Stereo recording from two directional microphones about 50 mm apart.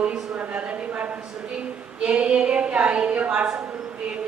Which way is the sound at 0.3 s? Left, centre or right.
Right.